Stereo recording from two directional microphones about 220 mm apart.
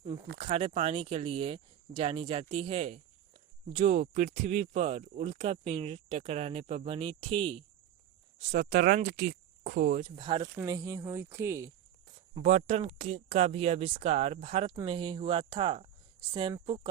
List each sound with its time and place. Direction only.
0.4 s speech: 25° right (ahead or behind)
10.2 s speech: 20° right (ahead or behind)
12.4 s speech: 35° right (ahead or behind)